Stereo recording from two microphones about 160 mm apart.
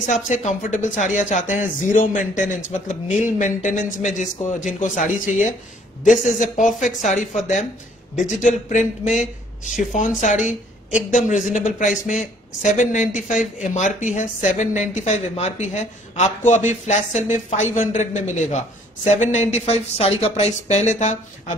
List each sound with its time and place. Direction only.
0.0 s speech: 50° left (ahead or behind)